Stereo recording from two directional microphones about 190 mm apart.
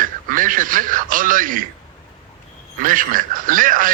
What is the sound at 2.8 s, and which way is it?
A man's voice, 45° right (ahead or behind).